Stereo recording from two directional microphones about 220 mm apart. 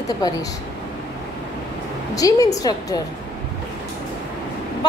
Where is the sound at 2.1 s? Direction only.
15° left (ahead or behind).